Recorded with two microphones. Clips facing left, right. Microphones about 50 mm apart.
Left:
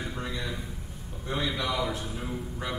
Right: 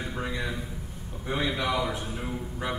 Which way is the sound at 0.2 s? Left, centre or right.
Centre.